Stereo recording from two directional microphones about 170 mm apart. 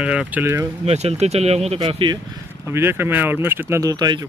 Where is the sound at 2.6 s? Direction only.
15° right (ahead or behind).